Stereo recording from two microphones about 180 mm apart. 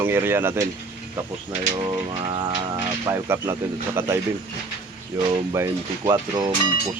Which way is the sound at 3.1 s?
15° right (ahead or behind).